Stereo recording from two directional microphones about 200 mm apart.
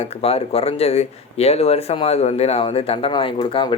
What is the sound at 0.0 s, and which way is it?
Speech, 30° left (ahead or behind).